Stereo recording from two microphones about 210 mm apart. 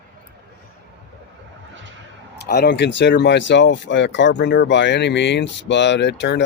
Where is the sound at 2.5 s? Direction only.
50° left (ahead or behind).